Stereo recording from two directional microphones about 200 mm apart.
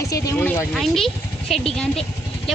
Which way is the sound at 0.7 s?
Centre (ahead or behind).